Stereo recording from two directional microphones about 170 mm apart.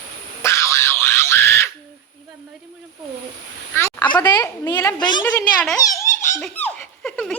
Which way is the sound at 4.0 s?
25° left (ahead or behind).